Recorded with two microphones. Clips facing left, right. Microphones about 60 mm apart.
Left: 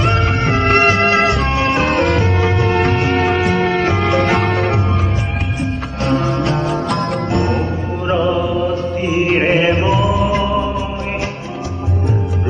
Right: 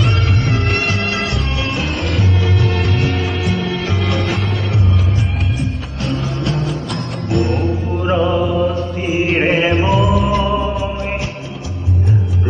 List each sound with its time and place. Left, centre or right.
0.0 s music: left
1.5 s music: left
2.0 s music: left
6.1 s music: left
8.0 s music: centre